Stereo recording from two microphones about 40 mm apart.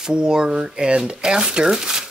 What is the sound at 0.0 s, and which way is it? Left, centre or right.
Speech, centre.